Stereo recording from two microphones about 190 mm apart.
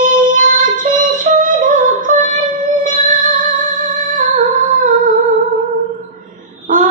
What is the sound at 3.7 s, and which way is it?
Music, 45° right (ahead or behind).